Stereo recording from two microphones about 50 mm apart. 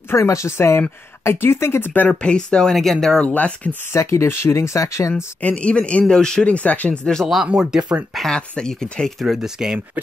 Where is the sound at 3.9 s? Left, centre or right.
Left.